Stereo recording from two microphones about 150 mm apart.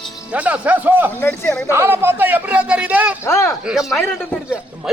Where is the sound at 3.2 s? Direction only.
20° left (ahead or behind).